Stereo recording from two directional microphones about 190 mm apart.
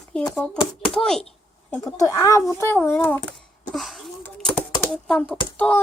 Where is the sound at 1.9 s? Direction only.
15° left (ahead or behind).